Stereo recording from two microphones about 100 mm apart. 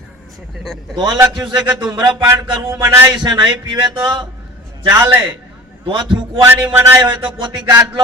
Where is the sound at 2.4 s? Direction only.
40° right (ahead or behind).